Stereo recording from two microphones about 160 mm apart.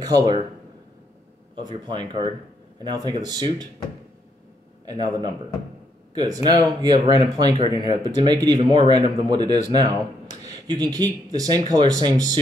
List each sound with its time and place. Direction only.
0.0 s speech: 25° right (ahead or behind)
1.5 s speech: 30° right (ahead or behind)
4.8 s speech: 25° right (ahead or behind)